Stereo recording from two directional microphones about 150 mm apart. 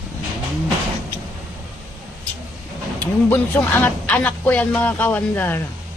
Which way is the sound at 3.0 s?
10° left (ahead or behind).